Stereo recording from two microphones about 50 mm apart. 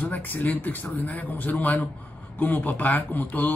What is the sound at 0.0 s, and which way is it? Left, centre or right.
Speech, left.